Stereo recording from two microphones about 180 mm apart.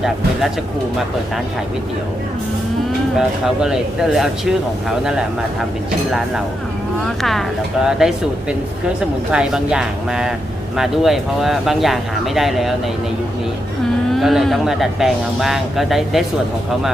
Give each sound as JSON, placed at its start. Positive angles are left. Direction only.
{"t": 3.2, "sound": "speech", "side_deg": -5}
{"t": 14.1, "sound": "speech", "side_deg": 0}